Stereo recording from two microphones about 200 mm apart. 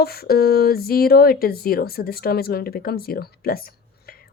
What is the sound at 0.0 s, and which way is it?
Speech, 50° left (ahead or behind).